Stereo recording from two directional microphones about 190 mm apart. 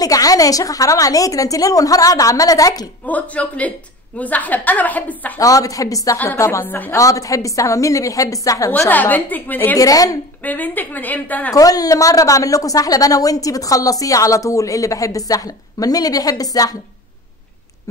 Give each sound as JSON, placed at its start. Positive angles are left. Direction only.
{"t": 0.0, "sound": "a woman's voice", "side_deg": 20}
{"t": 3.1, "sound": "a woman's voice", "side_deg": 10}
{"t": 11.5, "sound": "a woman's voice", "side_deg": 20}